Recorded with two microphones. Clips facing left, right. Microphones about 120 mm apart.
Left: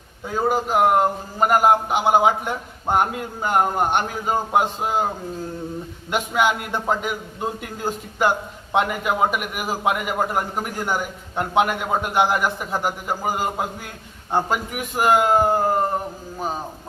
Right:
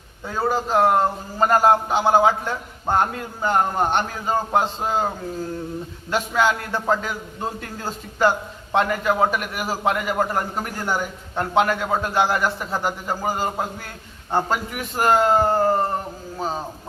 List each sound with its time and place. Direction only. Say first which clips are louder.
0.3 s a man's voice: left 1 dB; 15° left (ahead or behind)
6.1 s a man's voice: even; 15° left (ahead or behind)